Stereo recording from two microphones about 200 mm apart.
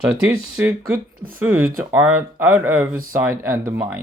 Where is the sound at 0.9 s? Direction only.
45° right (ahead or behind).